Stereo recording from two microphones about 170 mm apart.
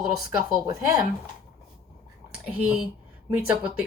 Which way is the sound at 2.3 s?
5° right (ahead or behind).